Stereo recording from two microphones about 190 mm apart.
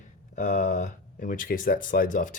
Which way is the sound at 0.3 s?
40° left (ahead or behind).